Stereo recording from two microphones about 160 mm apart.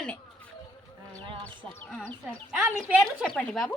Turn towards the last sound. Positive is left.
turn(degrees=5)  # may be behind; listen again after turning